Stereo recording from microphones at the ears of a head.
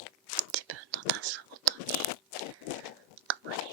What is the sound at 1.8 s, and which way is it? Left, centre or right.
Crunch, left.